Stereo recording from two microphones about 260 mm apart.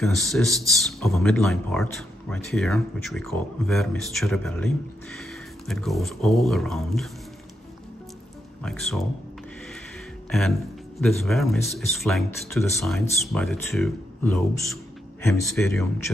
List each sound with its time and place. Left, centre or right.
0.0 s speech: centre
8.6 s speech: centre
11.0 s speech: centre